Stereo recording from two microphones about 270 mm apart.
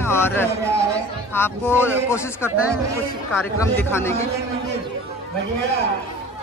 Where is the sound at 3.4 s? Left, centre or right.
Centre.